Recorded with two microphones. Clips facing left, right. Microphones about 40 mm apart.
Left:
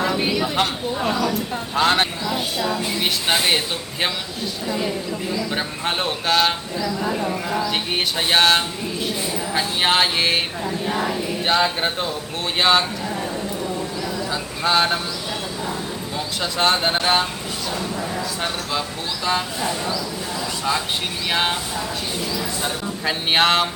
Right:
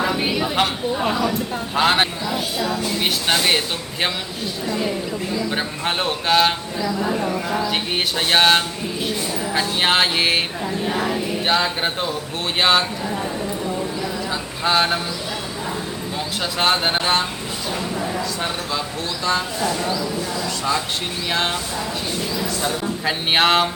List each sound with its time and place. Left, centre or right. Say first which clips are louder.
0.0 s speech: even; centre
2.3 s speech: even; centre
4.6 s speech: right 1 dB; centre
14.3 s a sound: even; centre
16.1 s speech: even; centre
21.2 s a sound: left 1 dB; centre
23.0 s speech: even; centre